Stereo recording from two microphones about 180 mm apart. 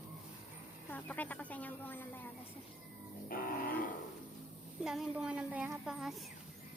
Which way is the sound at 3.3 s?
50° left (ahead or behind).